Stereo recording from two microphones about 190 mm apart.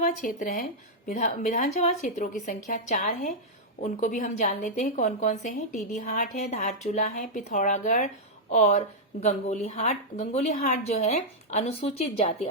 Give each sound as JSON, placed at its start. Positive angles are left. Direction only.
{"t": 0.0, "sound": "a woman's voice", "side_deg": 45}